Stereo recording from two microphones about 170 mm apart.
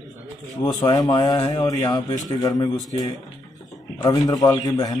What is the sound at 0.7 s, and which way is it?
A man's voice, 20° left (ahead or behind).